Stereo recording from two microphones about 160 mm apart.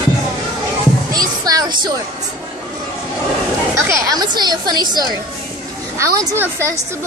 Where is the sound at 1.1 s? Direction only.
25° right (ahead or behind).